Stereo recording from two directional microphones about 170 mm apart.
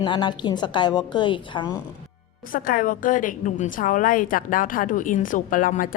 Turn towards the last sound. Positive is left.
turn(degrees=55)  # may be behind; listen again after turning